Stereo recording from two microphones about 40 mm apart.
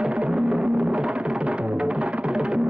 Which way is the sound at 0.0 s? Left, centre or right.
Right.